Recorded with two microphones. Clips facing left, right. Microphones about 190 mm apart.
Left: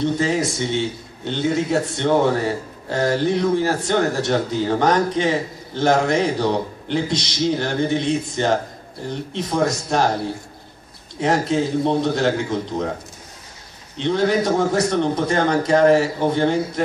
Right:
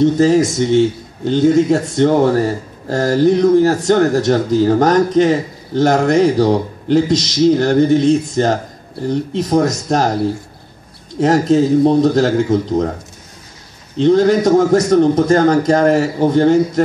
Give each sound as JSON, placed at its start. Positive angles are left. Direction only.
{"t": 0.0, "sound": "a man's voice", "side_deg": -45}
{"t": 11.1, "sound": "a man's voice", "side_deg": -40}
{"t": 13.9, "sound": "a man's voice", "side_deg": -45}